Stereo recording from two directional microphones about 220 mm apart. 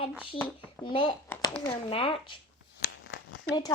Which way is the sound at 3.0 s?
60° left (ahead or behind).